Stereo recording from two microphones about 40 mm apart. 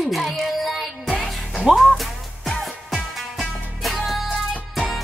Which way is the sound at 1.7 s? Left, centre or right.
Right.